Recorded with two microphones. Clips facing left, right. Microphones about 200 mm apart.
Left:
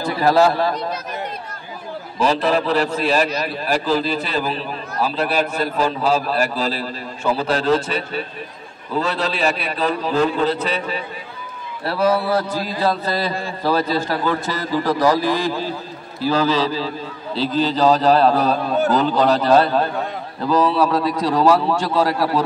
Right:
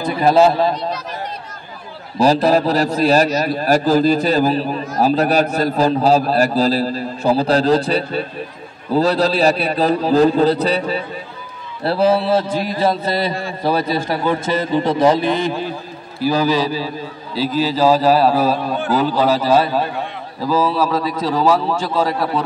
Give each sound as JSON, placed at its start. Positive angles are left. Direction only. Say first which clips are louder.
{"t": 0.0, "sound": "a man's voice", "louder": "right 3 dB", "side_deg": -20}
{"t": 2.1, "sound": "a man's voice", "louder": "right 5 dB", "side_deg": -40}